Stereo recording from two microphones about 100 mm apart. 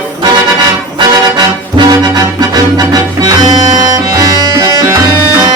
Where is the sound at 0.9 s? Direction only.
45° right (ahead or behind).